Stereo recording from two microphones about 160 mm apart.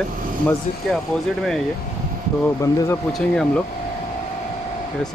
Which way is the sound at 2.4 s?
15° left (ahead or behind).